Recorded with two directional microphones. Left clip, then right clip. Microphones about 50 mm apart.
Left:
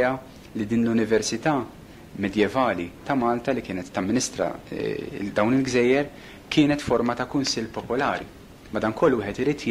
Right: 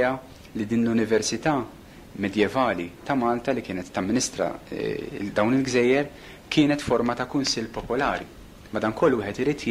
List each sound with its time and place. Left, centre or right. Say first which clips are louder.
0.0 s a man's voice: left 1 dB; right